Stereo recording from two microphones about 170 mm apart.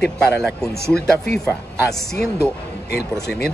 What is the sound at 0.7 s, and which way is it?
Speech, 70° left (ahead or behind).